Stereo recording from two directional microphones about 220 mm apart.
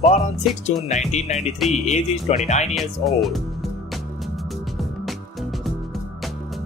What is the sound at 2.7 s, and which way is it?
Speech, centre (ahead or behind).